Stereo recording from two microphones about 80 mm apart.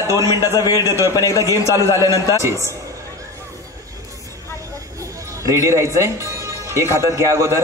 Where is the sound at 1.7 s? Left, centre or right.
Right.